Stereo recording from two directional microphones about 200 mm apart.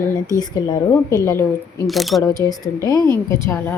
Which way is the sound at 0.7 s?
15° left (ahead or behind).